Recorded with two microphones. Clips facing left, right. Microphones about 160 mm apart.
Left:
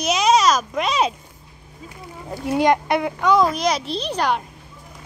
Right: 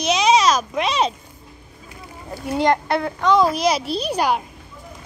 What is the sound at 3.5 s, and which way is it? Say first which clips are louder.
Speech: right 2 dB; 5° right (ahead or behind).